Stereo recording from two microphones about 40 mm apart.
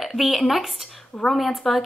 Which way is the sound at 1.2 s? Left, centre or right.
Left.